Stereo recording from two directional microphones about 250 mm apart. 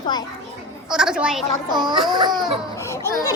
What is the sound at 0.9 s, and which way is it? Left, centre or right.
Speech, centre.